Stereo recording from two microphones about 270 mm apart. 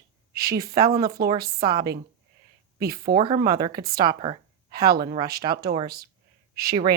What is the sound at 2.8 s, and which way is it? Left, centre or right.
Speech, right.